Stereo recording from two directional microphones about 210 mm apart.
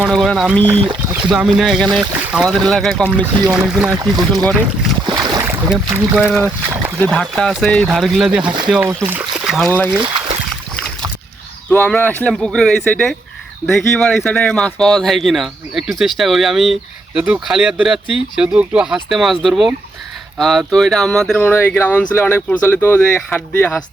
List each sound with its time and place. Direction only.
0.0 s speech: centre (ahead or behind)
3.9 s speech: 20° right (ahead or behind)
4.5 s speech: 5° right (ahead or behind)
5.0 s boat: 20° right (ahead or behind)
5.7 s speech: 5° right (ahead or behind)
6.7 s speech: 20° right (ahead or behind)
7.0 s speech: 5° left (ahead or behind)
8.4 s speech: 20° right (ahead or behind)
8.7 s speech: 10° right (ahead or behind)
11.7 s speech: 10° left (ahead or behind)